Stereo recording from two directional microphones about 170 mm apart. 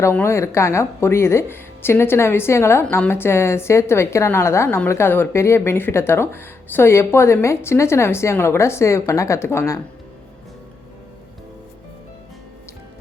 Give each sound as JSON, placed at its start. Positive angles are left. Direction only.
{"t": 0.0, "sound": "a woman's voice", "side_deg": 15}